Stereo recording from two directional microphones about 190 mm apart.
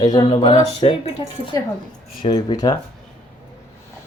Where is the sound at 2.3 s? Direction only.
20° left (ahead or behind).